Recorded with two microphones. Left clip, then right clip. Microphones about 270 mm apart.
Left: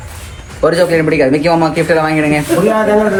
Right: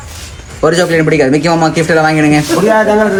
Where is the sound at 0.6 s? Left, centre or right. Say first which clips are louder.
Right 1 dB; right.